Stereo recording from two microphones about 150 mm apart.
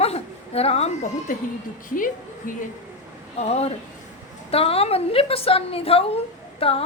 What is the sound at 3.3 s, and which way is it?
A woman's voice, 45° left (ahead or behind).